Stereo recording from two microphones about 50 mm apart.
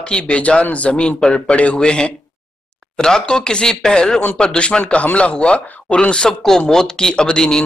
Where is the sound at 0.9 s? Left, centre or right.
Centre.